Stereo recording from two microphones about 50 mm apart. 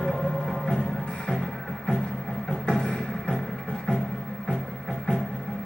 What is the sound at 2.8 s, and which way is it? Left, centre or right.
Music, centre.